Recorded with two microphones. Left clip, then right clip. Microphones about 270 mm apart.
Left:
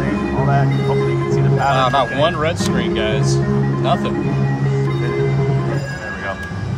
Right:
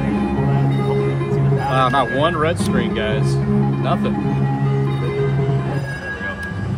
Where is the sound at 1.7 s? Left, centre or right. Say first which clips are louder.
Even; centre.